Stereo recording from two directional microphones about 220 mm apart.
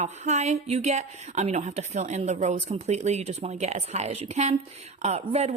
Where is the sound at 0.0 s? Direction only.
30° right (ahead or behind).